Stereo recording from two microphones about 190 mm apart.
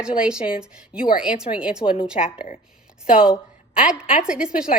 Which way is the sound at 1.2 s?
5° right (ahead or behind).